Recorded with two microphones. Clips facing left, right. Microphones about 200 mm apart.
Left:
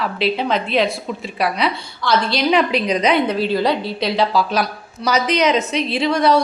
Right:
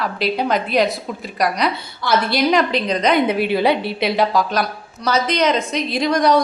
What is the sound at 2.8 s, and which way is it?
Speech, 10° left (ahead or behind).